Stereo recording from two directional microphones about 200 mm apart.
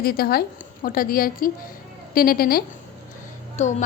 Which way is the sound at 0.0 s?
50° left (ahead or behind).